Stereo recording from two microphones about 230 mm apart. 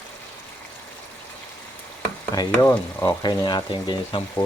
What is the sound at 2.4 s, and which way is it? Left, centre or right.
Frying, centre.